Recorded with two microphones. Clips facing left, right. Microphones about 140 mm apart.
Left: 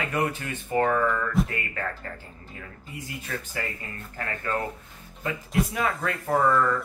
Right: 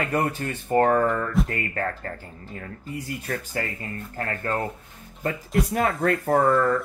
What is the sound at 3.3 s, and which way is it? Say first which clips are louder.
Speech: right 4 dB; 45° right (ahead or behind).